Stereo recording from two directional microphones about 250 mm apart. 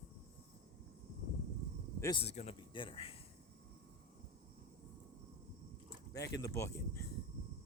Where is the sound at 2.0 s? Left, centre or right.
Centre.